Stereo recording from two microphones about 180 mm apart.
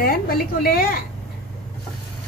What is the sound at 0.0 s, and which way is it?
A woman's voice, 55° left (ahead or behind).